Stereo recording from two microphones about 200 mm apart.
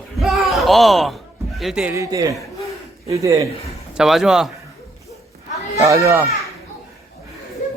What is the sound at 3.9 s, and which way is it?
Speech, centre (ahead or behind).